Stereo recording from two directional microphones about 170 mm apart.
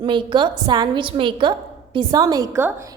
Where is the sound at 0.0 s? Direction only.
30° right (ahead or behind).